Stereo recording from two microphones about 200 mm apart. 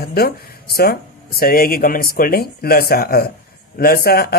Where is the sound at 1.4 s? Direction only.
45° left (ahead or behind).